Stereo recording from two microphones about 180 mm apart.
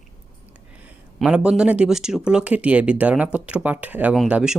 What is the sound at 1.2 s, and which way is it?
Speech, 5° right (ahead or behind).